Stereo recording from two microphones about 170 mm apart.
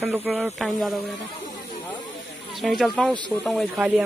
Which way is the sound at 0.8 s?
Centre (ahead or behind).